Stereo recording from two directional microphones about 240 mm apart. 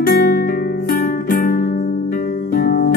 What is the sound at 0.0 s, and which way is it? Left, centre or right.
Music, left.